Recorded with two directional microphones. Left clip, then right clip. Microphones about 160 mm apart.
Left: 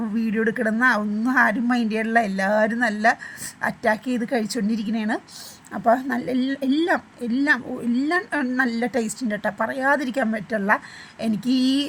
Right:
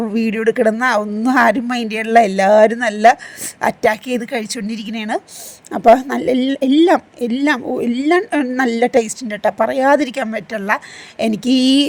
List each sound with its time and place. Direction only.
0.0 s a woman's voice: 35° right (ahead or behind)